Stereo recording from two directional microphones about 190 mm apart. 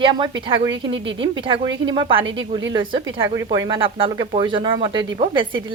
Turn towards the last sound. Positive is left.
turn(degrees=-25)  # may be behind; listen again after turning